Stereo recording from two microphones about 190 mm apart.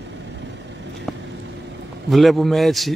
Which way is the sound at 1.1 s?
5° left (ahead or behind).